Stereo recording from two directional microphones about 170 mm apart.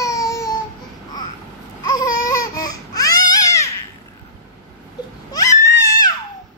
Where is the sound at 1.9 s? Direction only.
20° left (ahead or behind).